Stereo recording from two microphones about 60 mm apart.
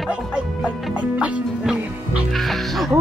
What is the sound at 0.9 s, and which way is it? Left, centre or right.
Music, right.